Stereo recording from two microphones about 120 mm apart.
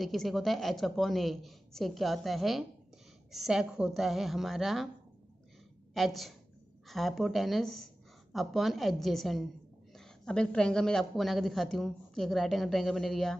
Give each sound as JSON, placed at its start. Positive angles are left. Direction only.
{"t": 0.0, "sound": "a woman's voice", "side_deg": 0}
{"t": 5.9, "sound": "a woman's voice", "side_deg": 0}